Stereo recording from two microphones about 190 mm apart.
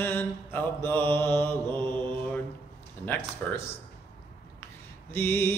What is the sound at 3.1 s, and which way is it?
Mantra, 10° left (ahead or behind).